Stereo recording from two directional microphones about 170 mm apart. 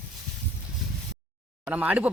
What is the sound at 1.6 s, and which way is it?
Speech, 10° right (ahead or behind).